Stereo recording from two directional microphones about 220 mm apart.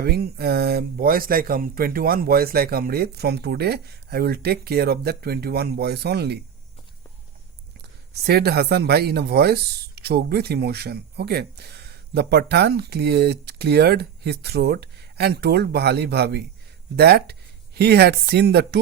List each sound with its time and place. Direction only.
0.0 s speech: 45° right (ahead or behind)
8.3 s speech: 45° right (ahead or behind)